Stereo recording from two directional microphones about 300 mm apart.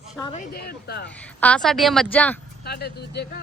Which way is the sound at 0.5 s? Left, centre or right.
Left.